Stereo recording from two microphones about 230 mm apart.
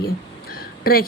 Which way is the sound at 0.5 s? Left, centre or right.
Left.